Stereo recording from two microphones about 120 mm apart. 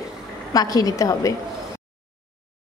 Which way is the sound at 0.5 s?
30° left (ahead or behind).